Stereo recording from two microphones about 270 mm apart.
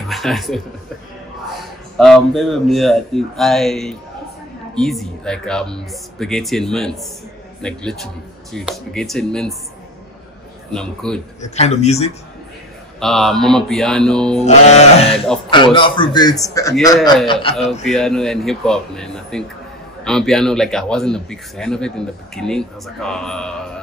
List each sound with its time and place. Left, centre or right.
0.1 s speech: centre
2.0 s speech: centre
10.7 s speech: centre
11.4 s speech: left
13.0 s speech: centre
14.4 s speech: left
17.8 s speech: centre